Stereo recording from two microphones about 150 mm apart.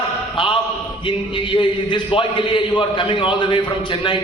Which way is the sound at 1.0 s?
35° left (ahead or behind).